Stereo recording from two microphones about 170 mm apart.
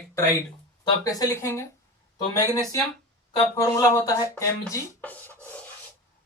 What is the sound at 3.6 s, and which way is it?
Rub, 20° left (ahead or behind).